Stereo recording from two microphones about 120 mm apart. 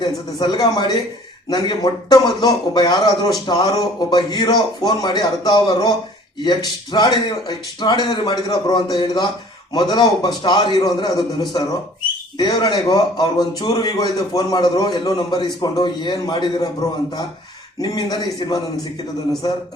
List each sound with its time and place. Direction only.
0.0 s a man's voice: 35° left (ahead or behind)